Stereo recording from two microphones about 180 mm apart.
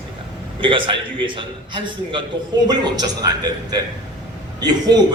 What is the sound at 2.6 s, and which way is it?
A man's voice, 25° right (ahead or behind).